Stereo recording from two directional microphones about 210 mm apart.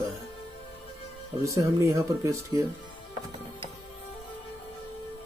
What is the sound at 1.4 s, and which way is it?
Speech, 15° right (ahead or behind).